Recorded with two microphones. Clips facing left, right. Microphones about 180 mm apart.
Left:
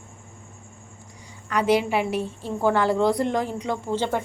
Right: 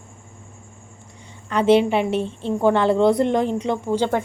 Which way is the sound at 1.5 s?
25° right (ahead or behind).